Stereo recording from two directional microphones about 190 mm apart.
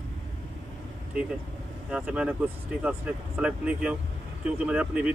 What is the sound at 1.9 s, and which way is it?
Speech, 5° right (ahead or behind).